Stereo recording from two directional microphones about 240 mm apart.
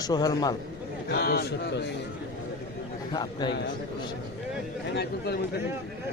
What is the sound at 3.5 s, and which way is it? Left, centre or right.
Speech, left.